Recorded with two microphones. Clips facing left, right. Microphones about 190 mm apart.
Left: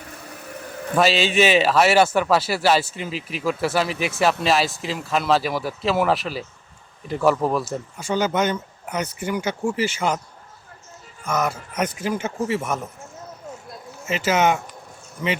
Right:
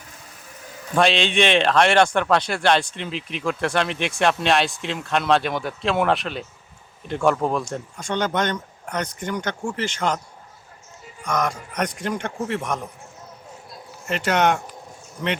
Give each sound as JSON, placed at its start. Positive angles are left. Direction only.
{"t": 0.3, "sound": "a sound", "side_deg": 65}
{"t": 0.9, "sound": "speech", "side_deg": 5}
{"t": 11.2, "sound": "speech", "side_deg": 5}
{"t": 14.0, "sound": "speech", "side_deg": 0}